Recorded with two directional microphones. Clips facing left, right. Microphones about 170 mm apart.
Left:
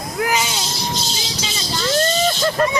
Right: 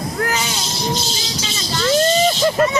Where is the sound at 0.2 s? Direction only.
15° left (ahead or behind).